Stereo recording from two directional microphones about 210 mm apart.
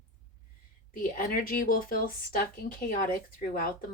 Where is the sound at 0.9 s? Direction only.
40° left (ahead or behind).